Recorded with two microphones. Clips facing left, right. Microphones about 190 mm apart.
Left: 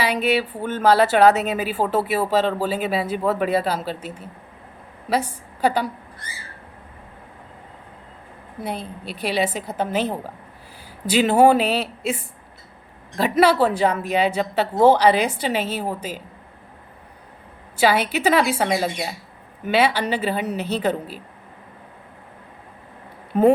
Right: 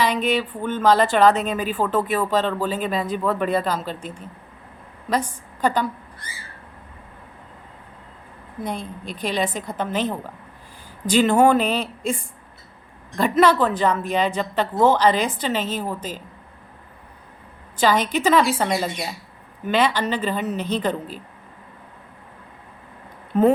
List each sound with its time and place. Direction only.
0.0 s a woman's voice: 10° left (ahead or behind)
3.2 s speech: 45° left (ahead or behind)
3.4 s a woman's voice: 10° left (ahead or behind)
8.6 s a woman's voice: 5° left (ahead or behind)
17.7 s a woman's voice: 10° left (ahead or behind)
18.6 s speech: 50° left (ahead or behind)
19.6 s a woman's voice: 10° left (ahead or behind)